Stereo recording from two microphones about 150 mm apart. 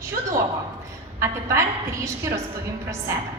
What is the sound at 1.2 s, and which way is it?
A woman's voice, 20° right (ahead or behind).